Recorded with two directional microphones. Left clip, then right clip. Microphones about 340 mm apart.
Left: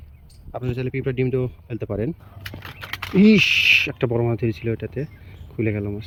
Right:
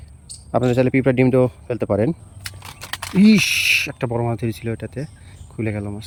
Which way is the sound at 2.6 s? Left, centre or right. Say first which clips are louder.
Even; right.